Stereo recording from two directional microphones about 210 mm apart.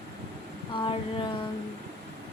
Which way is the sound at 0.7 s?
25° left (ahead or behind).